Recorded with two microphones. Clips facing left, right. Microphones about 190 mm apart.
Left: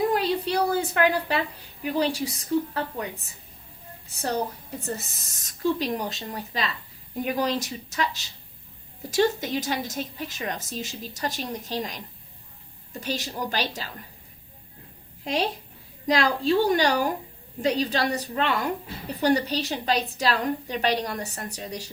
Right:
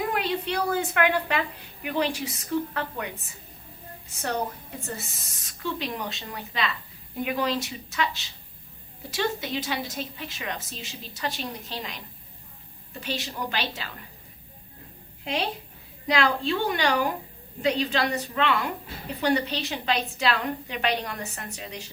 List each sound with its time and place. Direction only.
0.1 s a woman's voice: 35° left (ahead or behind)
4.8 s a woman's voice: 40° left (ahead or behind)
15.2 s a woman's voice: 40° left (ahead or behind)